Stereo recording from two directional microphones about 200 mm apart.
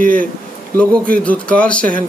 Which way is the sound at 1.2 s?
5° left (ahead or behind).